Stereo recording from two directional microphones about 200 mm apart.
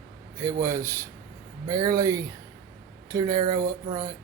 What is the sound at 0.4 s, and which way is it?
Speech, 15° right (ahead or behind).